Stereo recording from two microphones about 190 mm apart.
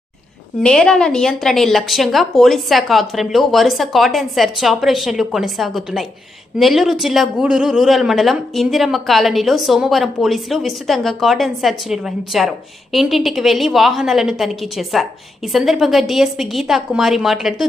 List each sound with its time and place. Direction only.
0.6 s speech: 5° left (ahead or behind)